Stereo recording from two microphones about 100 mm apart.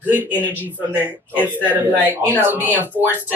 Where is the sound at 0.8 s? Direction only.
20° right (ahead or behind).